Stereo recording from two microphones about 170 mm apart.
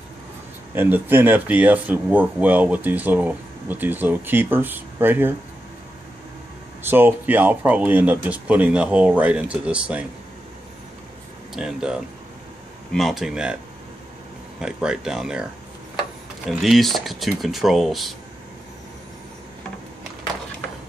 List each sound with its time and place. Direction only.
0.7 s speech: 10° right (ahead or behind)
6.8 s speech: 10° right (ahead or behind)
11.5 s speech: 5° right (ahead or behind)
14.6 s speech: 5° right (ahead or behind)
16.4 s speech: centre (ahead or behind)